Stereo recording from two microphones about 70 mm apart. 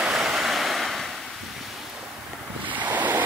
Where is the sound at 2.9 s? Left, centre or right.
Right.